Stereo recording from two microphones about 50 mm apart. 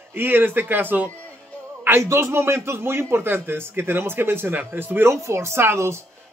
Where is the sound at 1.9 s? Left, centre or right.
Right.